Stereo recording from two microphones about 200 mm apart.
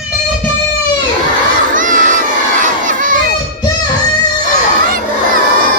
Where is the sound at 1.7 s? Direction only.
40° right (ahead or behind).